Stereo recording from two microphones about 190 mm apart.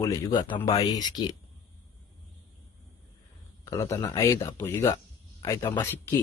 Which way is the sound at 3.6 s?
15° left (ahead or behind).